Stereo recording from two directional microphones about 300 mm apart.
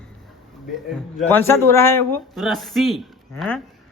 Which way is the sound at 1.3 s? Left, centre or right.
Centre.